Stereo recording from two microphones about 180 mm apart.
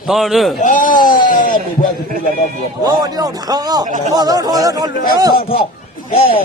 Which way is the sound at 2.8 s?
20° right (ahead or behind).